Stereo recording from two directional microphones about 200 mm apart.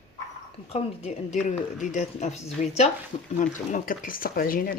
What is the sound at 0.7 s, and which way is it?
Speech, 30° left (ahead or behind).